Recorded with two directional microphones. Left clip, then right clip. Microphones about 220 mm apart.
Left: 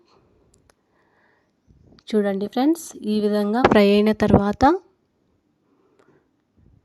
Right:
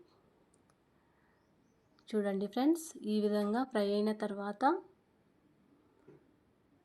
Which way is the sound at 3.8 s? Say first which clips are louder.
Left 17 dB; 90° left.